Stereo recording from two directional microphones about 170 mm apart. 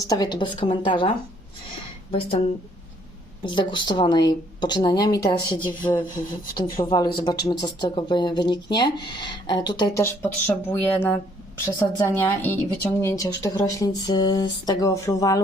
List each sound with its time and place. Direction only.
0.0 s speech: 20° left (ahead or behind)
3.4 s speech: 25° left (ahead or behind)
10.0 s speech: 15° left (ahead or behind)